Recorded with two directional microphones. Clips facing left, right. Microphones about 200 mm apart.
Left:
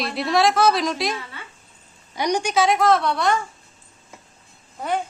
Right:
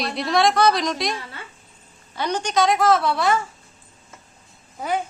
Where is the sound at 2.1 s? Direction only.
15° left (ahead or behind); by 3.4 s 5° right (ahead or behind).